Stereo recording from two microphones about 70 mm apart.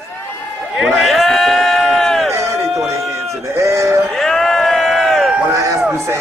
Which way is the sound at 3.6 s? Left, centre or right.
Right.